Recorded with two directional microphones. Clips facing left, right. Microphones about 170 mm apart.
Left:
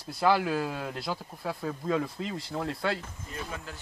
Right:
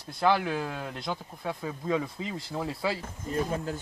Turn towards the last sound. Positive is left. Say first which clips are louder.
# right 9 dB
turn(degrees=-35)  # may be behind; listen again after turning